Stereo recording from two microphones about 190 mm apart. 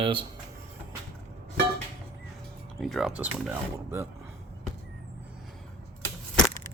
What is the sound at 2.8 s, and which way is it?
Speech, centre (ahead or behind).